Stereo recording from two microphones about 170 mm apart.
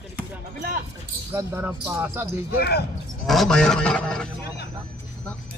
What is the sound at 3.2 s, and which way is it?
A man's voice, centre (ahead or behind).